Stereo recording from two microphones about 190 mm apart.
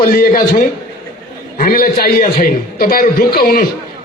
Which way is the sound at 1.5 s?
50° left (ahead or behind).